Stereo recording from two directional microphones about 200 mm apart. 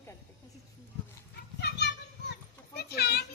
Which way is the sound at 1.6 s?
60° left (ahead or behind).